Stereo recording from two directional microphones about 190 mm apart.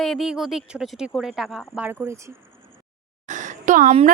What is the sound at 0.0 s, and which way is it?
Speech, centre (ahead or behind).